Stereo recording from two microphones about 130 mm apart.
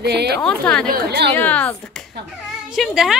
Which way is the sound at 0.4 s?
5° left (ahead or behind).